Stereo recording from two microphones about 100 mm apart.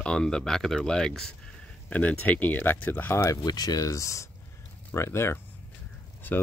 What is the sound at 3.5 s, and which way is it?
Speech, 40° left (ahead or behind).